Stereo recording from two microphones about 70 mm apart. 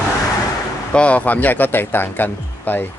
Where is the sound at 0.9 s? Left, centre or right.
Centre.